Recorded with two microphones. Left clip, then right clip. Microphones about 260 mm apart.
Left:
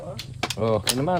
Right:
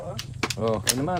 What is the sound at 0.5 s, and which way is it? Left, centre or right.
Speech, left.